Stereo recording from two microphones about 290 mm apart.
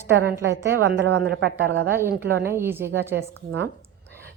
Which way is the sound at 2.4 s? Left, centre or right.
Centre.